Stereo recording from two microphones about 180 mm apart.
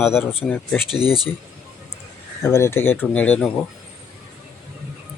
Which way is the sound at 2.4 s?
15° left (ahead or behind).